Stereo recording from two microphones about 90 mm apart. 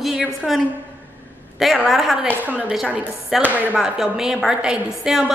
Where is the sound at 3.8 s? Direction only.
5° right (ahead or behind).